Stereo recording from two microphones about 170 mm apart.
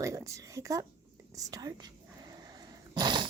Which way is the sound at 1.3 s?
20° right (ahead or behind).